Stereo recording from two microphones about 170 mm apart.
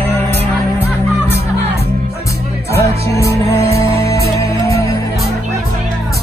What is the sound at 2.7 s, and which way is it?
Music, 15° left (ahead or behind).